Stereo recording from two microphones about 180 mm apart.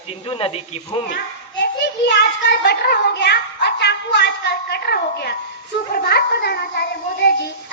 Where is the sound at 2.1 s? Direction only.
70° left (ahead or behind).